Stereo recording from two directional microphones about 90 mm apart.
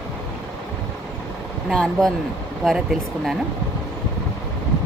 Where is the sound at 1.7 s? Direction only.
5° left (ahead or behind).